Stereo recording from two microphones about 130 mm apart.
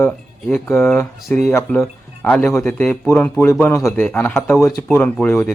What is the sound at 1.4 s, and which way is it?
Speech, 10° left (ahead or behind).